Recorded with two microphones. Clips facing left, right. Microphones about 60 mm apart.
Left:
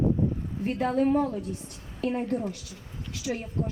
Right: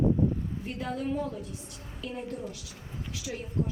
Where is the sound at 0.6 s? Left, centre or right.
Left.